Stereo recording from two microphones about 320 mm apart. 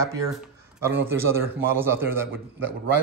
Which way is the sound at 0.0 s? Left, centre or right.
Centre.